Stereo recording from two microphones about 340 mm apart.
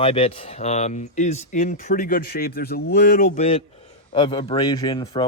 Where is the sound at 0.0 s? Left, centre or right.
Centre.